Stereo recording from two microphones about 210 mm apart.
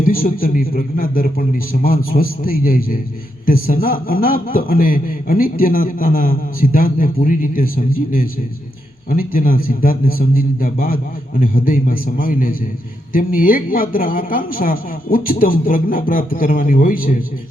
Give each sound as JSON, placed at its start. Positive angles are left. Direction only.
{"t": 0.0, "sound": "a man's voice", "side_deg": 40}